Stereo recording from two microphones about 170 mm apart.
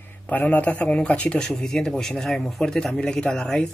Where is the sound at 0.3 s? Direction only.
10° left (ahead or behind).